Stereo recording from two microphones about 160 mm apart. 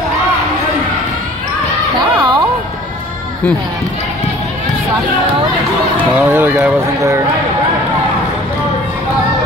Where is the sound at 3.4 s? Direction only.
5° left (ahead or behind).